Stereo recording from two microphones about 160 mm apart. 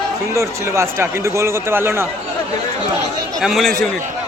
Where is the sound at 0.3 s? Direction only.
15° right (ahead or behind).